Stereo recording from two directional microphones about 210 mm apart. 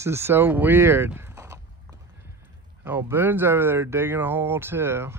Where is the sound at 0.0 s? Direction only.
10° right (ahead or behind).